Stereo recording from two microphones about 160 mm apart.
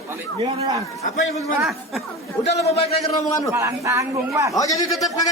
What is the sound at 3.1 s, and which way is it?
Speech, 20° left (ahead or behind).